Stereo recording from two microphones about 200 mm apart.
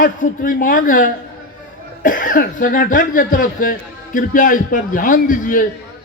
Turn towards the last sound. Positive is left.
turn(degrees=40)  # may be behind; listen again after turning